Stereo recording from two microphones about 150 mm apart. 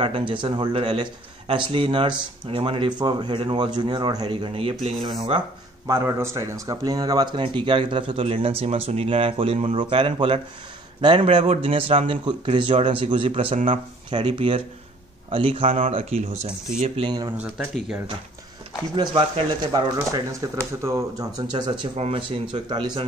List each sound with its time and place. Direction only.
0.0 s speech: 35° right (ahead or behind)
5.9 s a man's voice: 20° right (ahead or behind); by 17.1 s 45° right (ahead or behind)
18.9 s speech: 30° right (ahead or behind)
21.9 s speech: 40° right (ahead or behind)